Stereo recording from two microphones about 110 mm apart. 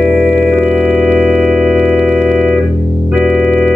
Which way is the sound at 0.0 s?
10° right (ahead or behind).